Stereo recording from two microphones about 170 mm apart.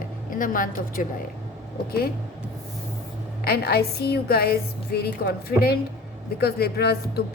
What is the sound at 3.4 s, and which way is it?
A woman's voice, 65° left (ahead or behind).